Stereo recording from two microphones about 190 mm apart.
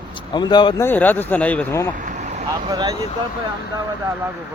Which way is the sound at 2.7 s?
20° right (ahead or behind).